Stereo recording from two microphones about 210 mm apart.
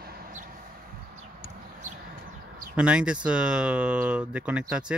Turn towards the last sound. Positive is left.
turn(degrees=-5)  # may be behind; listen again after turning